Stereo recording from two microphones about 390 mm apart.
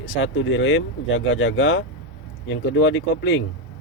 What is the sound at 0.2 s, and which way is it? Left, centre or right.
Speech, left.